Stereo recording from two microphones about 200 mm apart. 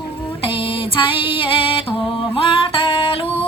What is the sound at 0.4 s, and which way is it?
Female singing, 25° left (ahead or behind).